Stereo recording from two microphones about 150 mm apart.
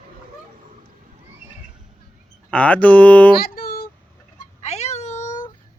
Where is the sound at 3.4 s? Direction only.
85° left.